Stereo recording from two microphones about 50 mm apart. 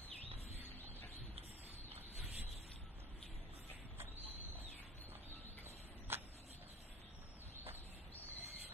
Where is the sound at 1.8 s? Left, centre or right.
Right.